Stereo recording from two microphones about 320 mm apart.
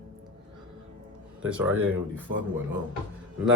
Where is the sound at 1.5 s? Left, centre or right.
Centre.